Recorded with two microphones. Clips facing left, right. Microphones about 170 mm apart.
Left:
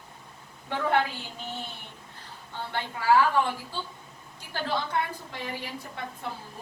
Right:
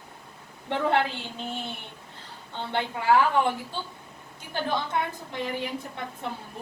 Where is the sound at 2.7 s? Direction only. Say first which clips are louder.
Right 1 dB; 20° right (ahead or behind).